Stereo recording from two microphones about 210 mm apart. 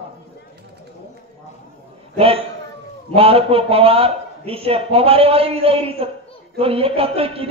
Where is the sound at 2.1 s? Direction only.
25° right (ahead or behind).